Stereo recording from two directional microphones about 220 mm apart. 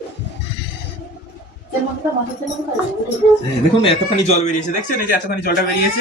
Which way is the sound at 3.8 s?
30° left (ahead or behind).